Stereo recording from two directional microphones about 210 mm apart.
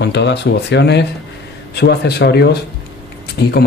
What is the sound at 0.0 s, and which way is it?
Speech, 55° left (ahead or behind).